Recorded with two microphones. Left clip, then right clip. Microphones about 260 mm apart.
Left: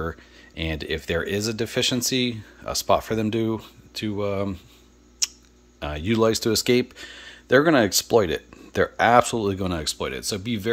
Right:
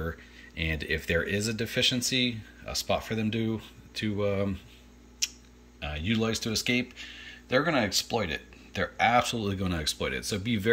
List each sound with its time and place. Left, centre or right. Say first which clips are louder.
0.6 s speech: left 3 dB; centre
5.2 s tick-tock: left 5 dB; centre
5.8 s speech: left 8 dB; centre